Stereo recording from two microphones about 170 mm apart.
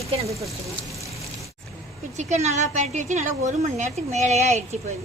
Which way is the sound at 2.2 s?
40° right (ahead or behind).